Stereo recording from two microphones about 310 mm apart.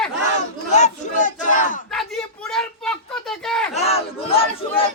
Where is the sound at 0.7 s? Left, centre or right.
Left.